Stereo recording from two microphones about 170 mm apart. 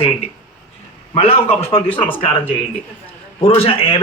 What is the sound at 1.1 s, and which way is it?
Speech, 35° left (ahead or behind).